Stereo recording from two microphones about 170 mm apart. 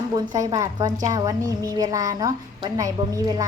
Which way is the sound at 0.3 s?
20° right (ahead or behind).